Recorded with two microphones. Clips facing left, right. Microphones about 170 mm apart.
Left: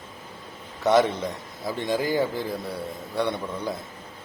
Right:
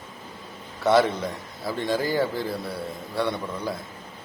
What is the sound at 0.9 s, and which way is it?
A man's voice, 20° left (ahead or behind).